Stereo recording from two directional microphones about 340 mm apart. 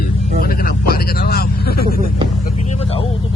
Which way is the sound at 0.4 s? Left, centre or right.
Left.